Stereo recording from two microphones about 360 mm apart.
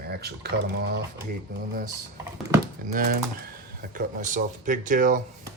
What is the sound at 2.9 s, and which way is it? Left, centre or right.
Speech, right.